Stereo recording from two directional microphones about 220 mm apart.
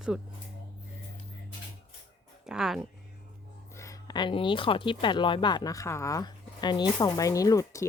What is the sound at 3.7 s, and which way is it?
Speech, 15° left (ahead or behind).